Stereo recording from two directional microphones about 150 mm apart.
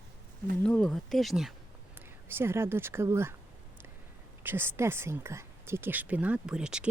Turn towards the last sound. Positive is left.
turn(degrees=-5)  # may be behind; listen again after turning